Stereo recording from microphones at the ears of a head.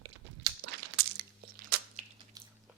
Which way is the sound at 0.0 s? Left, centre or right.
Right.